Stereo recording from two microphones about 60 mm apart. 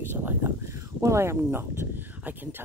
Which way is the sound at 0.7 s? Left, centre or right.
Right.